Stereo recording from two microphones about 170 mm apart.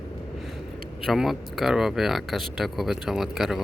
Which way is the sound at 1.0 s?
Centre (ahead or behind).